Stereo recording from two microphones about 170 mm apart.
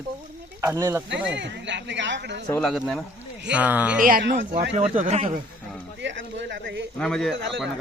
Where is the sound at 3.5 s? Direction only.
10° right (ahead or behind).